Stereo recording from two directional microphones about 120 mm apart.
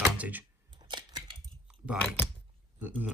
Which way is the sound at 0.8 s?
40° right (ahead or behind).